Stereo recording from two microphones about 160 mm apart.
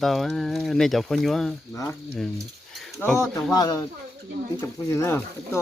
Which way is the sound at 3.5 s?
25° left (ahead or behind).